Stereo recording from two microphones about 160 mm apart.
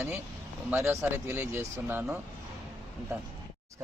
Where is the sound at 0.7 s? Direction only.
15° right (ahead or behind).